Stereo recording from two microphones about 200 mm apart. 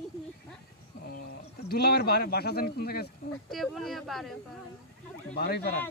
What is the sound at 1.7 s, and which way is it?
Speech, 50° left (ahead or behind).